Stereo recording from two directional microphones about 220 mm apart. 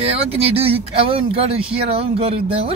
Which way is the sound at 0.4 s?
25° right (ahead or behind).